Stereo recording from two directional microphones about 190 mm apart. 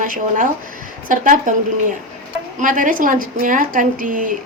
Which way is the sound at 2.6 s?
45° right (ahead or behind).